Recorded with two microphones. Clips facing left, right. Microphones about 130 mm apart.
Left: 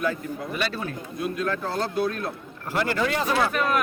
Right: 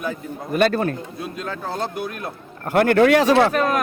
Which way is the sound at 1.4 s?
20° right (ahead or behind).